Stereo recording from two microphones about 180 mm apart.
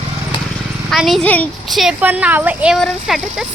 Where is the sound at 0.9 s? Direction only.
Centre (ahead or behind).